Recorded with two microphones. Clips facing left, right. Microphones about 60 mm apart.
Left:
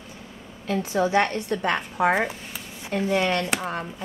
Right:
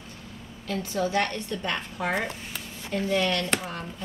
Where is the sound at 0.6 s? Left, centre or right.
Centre.